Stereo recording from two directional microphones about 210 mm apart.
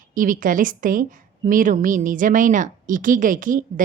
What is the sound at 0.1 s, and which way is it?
Speech, 40° right (ahead or behind).